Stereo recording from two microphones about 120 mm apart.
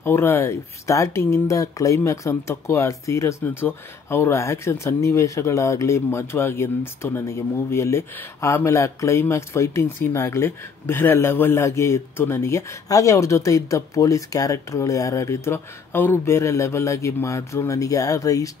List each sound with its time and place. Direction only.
0.0 s speech: 20° left (ahead or behind)